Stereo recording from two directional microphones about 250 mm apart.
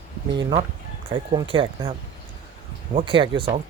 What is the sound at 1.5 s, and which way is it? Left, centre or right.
Speech, right.